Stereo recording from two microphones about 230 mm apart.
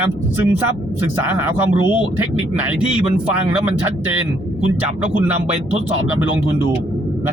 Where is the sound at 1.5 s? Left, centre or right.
Centre.